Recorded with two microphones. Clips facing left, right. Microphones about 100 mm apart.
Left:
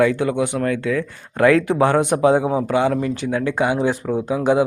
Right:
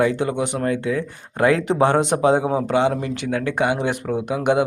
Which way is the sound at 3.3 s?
55° right (ahead or behind).